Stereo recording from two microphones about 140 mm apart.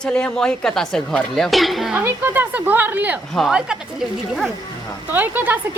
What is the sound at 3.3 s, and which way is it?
Speech, centre (ahead or behind).